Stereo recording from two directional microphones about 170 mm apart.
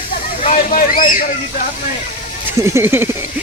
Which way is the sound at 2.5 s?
15° right (ahead or behind).